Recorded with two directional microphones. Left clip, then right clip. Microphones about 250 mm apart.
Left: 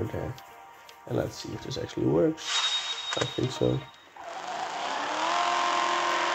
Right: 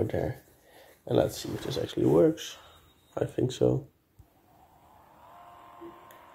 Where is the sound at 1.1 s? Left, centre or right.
Centre.